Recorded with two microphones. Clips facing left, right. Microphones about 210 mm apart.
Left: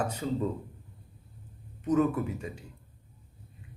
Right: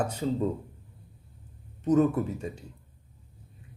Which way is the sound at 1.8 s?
35° right (ahead or behind).